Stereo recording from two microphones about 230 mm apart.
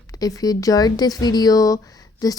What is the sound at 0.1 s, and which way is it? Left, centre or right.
Speech, centre.